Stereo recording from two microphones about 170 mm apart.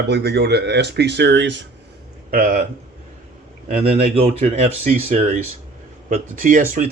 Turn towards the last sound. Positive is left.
turn(degrees=-50)  # may be behind; listen again after turning